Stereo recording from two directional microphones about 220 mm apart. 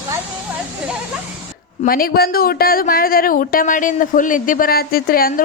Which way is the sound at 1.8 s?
40° left (ahead or behind).